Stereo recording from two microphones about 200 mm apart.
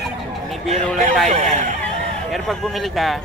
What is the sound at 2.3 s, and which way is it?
Speech, centre (ahead or behind).